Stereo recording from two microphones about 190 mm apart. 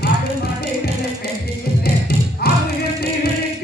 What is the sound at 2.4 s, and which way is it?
Music, 55° left (ahead or behind).